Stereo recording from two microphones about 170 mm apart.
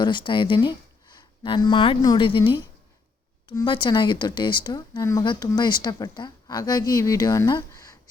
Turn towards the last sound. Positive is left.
turn(degrees=20)  # may be behind; listen again after turning